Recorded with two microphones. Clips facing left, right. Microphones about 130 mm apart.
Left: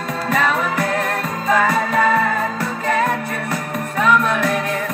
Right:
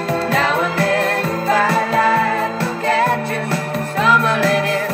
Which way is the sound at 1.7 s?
30° right (ahead or behind).